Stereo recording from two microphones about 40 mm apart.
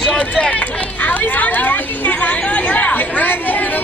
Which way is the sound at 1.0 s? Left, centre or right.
Left.